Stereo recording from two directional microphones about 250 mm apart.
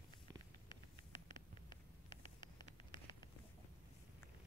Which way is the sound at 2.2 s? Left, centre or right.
Centre.